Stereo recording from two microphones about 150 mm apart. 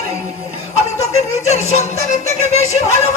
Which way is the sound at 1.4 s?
50° left (ahead or behind).